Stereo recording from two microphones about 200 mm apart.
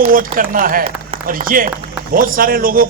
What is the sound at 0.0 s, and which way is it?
A man's voice, 45° right (ahead or behind).